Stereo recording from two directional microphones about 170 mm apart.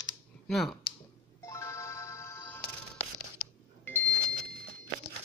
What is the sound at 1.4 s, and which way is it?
Music, 15° left (ahead or behind).